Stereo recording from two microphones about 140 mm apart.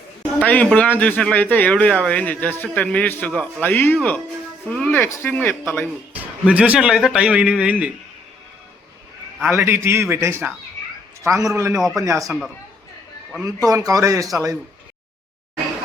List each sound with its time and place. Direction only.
0.3 s speech: 10° left (ahead or behind)
6.4 s a man's voice: 10° right (ahead or behind)
9.5 s a man's voice: 20° right (ahead or behind)
13.4 s a man's voice: 25° right (ahead or behind)